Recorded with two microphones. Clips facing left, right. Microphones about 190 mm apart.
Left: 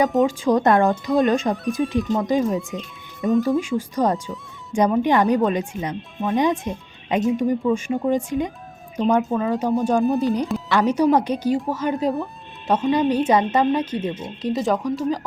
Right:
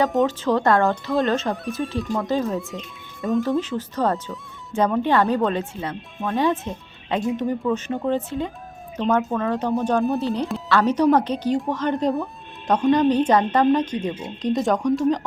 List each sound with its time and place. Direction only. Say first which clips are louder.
0.1 s speech: left 2 dB; centre (ahead or behind)
0.4 s speech: left 3 dB; 15° left (ahead or behind)
2.7 s speech: left 3 dB; centre (ahead or behind)
3.6 s speech: left 2 dB; 10° left (ahead or behind)
10.2 s speech: left 3 dB; 15° left (ahead or behind)